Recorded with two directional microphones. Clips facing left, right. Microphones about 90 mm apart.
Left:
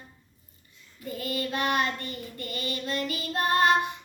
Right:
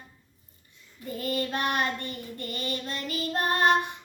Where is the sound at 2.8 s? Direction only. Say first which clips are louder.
Left 4 dB; 30° right (ahead or behind).